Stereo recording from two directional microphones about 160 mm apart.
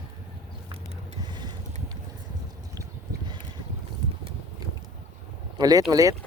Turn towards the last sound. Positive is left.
turn(degrees=-20)  # may be behind; listen again after turning